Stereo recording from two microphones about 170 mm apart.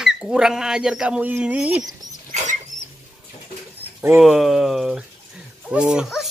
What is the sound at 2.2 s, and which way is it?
Rodents, 45° right (ahead or behind).